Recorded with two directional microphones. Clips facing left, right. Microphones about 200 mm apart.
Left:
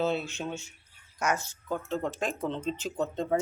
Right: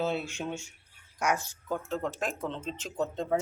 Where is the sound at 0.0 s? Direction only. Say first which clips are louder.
Left 2 dB; 10° right (ahead or behind).